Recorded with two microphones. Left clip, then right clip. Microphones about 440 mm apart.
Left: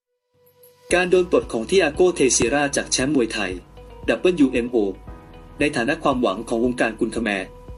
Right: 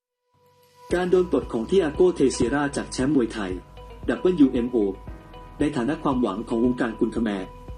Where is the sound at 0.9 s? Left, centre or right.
Left.